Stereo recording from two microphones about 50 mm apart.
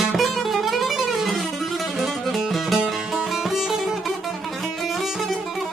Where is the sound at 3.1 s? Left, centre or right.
Centre.